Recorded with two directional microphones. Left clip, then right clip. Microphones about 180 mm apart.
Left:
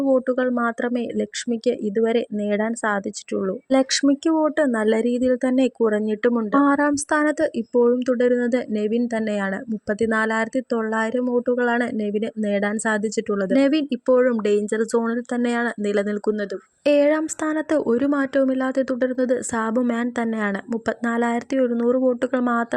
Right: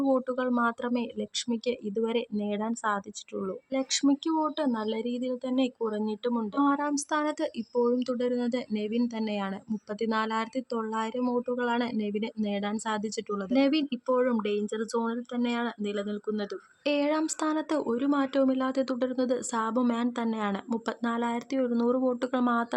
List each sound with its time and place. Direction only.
0.0 s speech: 20° left (ahead or behind)
3.7 s speech: 40° left (ahead or behind); by 22.6 s 25° left (ahead or behind)